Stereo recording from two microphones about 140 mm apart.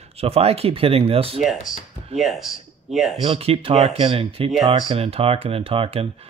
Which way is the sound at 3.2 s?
45° right (ahead or behind).